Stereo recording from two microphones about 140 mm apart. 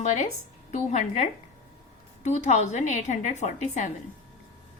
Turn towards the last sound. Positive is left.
turn(degrees=55)  # may be behind; listen again after turning